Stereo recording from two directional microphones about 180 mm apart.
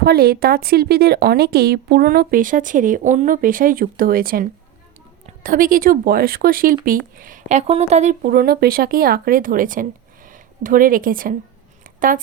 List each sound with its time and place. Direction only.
0.0 s a woman's voice: 60° right (ahead or behind); by 8.1 s 40° right (ahead or behind)
8.2 s a woman's voice: 55° right (ahead or behind)
11.8 s a sound: 50° right (ahead or behind)